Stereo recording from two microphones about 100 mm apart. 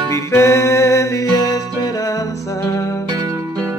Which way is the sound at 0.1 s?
30° left (ahead or behind).